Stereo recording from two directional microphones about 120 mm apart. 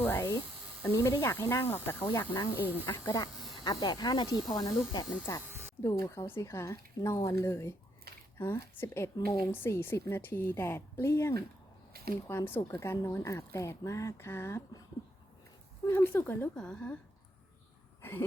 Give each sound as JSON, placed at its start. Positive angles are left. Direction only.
{"t": 0.0, "sound": "a sound", "side_deg": 20}
{"t": 0.8, "sound": "speech", "side_deg": 20}
{"t": 2.6, "sound": "speech", "side_deg": -15}
{"t": 2.8, "sound": "speech", "side_deg": 20}
{"t": 3.5, "sound": "speech", "side_deg": 40}
{"t": 5.5, "sound": "a sound", "side_deg": -20}
{"t": 5.8, "sound": "speech", "side_deg": 25}
{"t": 9.1, "sound": "speech", "side_deg": 35}
{"t": 9.5, "sound": "speech", "side_deg": 20}
{"t": 12.5, "sound": "speech", "side_deg": 20}
{"t": 15.9, "sound": "speech", "side_deg": 15}
{"t": 16.6, "sound": "speech", "side_deg": 5}
{"t": 18.0, "sound": "throat clearing", "side_deg": 15}